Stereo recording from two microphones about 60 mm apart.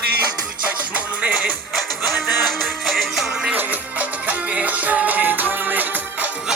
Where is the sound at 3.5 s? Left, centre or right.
Right.